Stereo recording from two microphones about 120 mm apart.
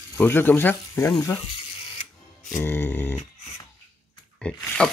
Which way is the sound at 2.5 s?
20° left (ahead or behind).